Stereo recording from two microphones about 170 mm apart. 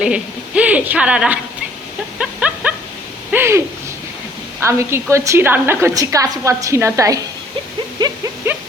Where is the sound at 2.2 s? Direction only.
5° right (ahead or behind).